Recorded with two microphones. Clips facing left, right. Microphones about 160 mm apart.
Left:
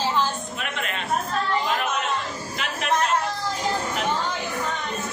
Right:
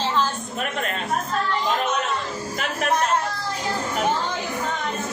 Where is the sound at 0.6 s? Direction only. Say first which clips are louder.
Right 5 dB; 40° right (ahead or behind).